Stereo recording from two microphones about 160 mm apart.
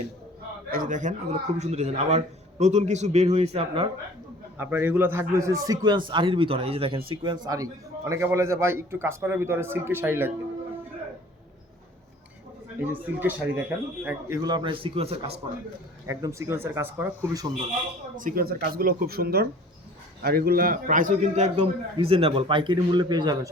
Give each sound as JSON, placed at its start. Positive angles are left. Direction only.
{"t": 0.7, "sound": "speech", "side_deg": -55}
{"t": 4.5, "sound": "a man's voice", "side_deg": -15}
{"t": 12.9, "sound": "a man's voice", "side_deg": -10}
{"t": 14.4, "sound": "a man's voice", "side_deg": -30}
{"t": 16.0, "sound": "a man's voice", "side_deg": -20}
{"t": 18.2, "sound": "a man's voice", "side_deg": -60}
{"t": 21.5, "sound": "a man's voice", "side_deg": -30}